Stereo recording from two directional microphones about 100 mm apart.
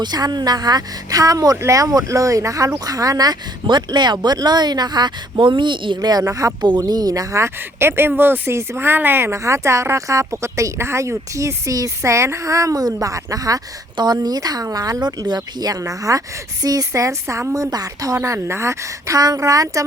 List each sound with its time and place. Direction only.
0.0 s speech: 45° right (ahead or behind)